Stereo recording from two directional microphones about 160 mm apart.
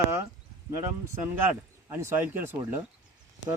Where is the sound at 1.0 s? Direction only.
15° right (ahead or behind).